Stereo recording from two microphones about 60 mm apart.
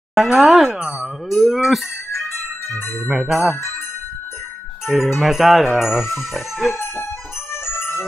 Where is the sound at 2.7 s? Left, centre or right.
Left.